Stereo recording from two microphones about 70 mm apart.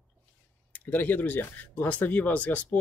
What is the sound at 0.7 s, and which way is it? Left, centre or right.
Speech, left.